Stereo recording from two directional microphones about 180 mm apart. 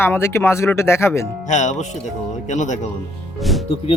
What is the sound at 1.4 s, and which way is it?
Speech, 40° left (ahead or behind).